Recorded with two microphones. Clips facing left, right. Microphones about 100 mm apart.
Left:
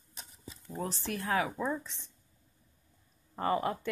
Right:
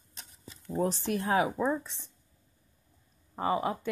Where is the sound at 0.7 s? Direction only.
20° right (ahead or behind).